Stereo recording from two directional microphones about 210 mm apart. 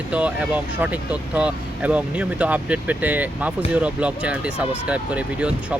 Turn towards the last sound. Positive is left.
turn(degrees=-5)  # may be behind; listen again after turning